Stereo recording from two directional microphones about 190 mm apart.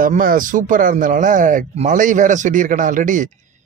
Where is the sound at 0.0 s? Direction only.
45° right (ahead or behind).